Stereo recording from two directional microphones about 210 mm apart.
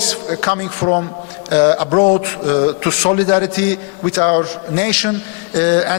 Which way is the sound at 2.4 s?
20° left (ahead or behind).